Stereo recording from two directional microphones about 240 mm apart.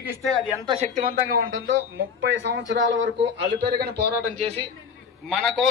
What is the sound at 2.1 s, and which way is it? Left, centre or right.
Speech, right.